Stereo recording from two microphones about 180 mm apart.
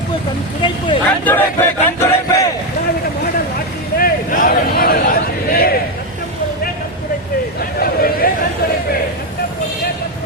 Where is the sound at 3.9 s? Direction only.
55° left (ahead or behind).